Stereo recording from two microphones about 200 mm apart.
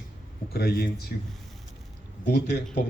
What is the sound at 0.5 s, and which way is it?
Speech, 50° left (ahead or behind).